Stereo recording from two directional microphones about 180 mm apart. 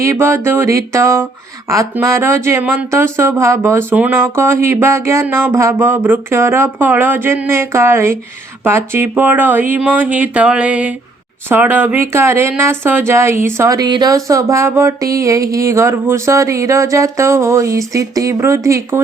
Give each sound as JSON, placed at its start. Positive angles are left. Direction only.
{"t": 0.0, "sound": "speech", "side_deg": -15}